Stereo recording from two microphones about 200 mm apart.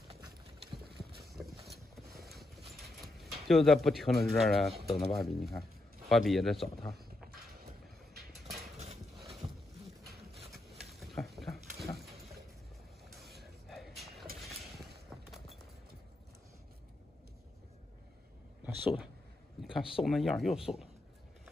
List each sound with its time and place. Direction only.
0.8 s clip-clop: 50° right (ahead or behind)
3.0 s speech: centre (ahead or behind)
7.2 s vehicle: 50° right (ahead or behind)
9.1 s horse: centre (ahead or behind)
10.1 s a sound: centre (ahead or behind)
18.6 s a sound: 5° right (ahead or behind)
19.6 s speech: centre (ahead or behind)